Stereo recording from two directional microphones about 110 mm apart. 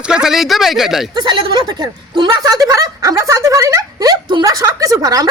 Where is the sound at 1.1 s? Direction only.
40° right (ahead or behind).